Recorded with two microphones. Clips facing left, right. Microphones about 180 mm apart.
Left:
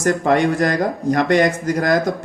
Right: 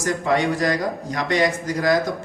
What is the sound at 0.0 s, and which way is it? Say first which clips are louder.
Speech: left 5 dB; 55° left (ahead or behind).